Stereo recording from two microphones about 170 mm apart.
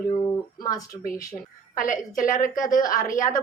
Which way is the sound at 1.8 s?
50° left (ahead or behind).